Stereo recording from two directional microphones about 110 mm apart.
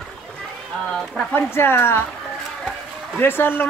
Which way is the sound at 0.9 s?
5° left (ahead or behind).